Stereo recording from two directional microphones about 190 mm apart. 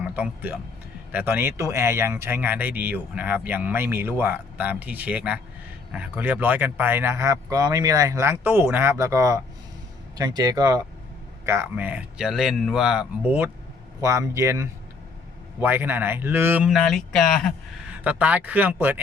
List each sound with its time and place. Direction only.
0.0 s a man's voice: 10° right (ahead or behind)
14.0 s speech: 15° right (ahead or behind)
16.6 s a man's voice: centre (ahead or behind)
18.0 s speech: 10° right (ahead or behind)